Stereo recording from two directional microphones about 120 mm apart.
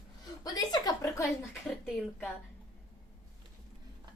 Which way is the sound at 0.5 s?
30° left (ahead or behind).